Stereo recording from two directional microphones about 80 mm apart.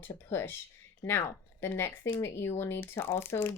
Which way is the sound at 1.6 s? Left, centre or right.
Left.